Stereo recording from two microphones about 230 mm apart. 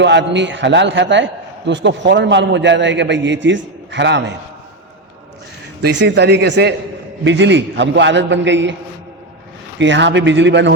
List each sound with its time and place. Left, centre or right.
0.0 s a man's voice: right
5.8 s a man's voice: right
9.7 s a man's voice: right